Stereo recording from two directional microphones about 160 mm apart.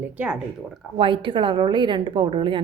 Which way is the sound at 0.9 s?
30° right (ahead or behind).